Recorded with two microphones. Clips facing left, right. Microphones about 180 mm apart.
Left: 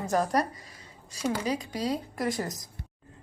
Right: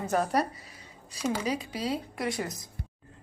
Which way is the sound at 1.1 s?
35° left (ahead or behind).